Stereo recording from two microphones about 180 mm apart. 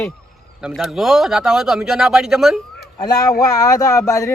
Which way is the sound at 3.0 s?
20° left (ahead or behind).